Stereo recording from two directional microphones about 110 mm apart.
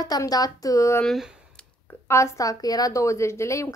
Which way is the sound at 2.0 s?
25° left (ahead or behind).